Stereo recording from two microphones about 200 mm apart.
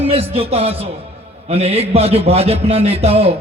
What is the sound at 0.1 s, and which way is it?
A man's voice, 30° right (ahead or behind).